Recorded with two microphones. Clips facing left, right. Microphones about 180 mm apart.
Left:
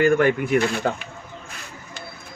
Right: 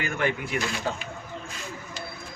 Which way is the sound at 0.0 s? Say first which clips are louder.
Left 10 dB; 50° left (ahead or behind).